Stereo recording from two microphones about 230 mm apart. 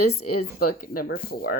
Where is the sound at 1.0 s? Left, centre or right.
Left.